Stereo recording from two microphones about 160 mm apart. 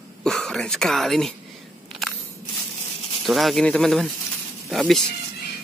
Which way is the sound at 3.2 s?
Centre (ahead or behind).